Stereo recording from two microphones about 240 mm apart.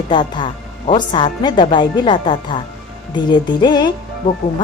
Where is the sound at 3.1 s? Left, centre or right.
Centre.